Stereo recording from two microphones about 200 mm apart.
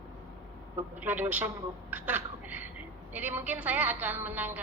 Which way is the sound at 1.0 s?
10° right (ahead or behind).